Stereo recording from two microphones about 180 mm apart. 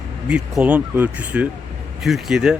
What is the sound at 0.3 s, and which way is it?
Speech, 5° right (ahead or behind).